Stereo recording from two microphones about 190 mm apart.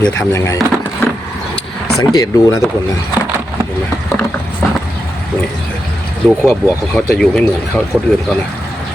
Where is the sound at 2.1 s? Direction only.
15° left (ahead or behind).